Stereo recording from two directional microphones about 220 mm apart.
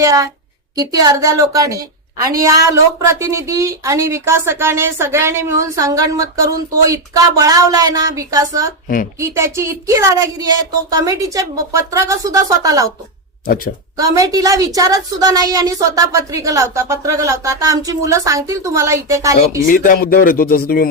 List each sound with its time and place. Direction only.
0.0 s speech: 15° right (ahead or behind)
13.9 s speech: 15° right (ahead or behind)
19.6 s speech: 40° left (ahead or behind)